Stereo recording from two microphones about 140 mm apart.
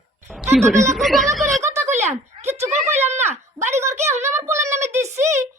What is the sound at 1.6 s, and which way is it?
Speech, 20° right (ahead or behind).